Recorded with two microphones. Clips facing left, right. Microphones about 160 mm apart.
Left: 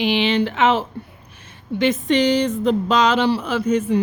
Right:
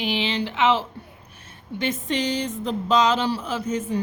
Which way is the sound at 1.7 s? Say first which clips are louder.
Left 8 dB; 75° left (ahead or behind).